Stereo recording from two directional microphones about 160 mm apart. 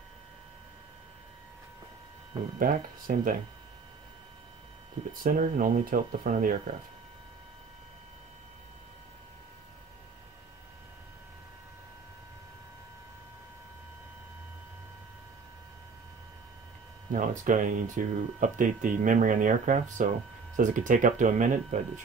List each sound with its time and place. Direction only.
2.6 s speech: 60° right (ahead or behind)
5.2 s speech: 60° right (ahead or behind)
17.1 s speech: 55° right (ahead or behind)